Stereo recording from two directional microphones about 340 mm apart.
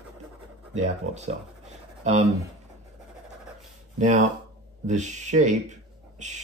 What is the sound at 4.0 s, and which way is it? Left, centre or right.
Speech, right.